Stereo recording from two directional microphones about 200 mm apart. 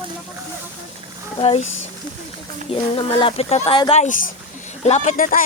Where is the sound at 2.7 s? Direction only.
25° left (ahead or behind).